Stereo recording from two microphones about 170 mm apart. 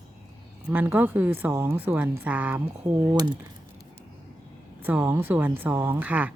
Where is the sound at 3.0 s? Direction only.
25° right (ahead or behind).